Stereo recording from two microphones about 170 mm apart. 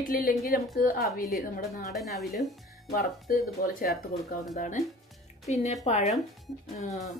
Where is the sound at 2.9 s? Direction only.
60° left (ahead or behind).